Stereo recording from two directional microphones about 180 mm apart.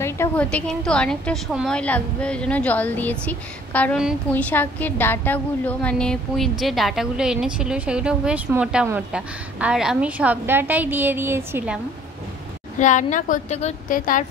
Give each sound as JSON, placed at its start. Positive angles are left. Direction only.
{"t": 0.0, "sound": "a woman's voice", "side_deg": 10}
{"t": 12.7, "sound": "a woman's voice", "side_deg": 45}
{"t": 13.9, "sound": "a woman's voice", "side_deg": 50}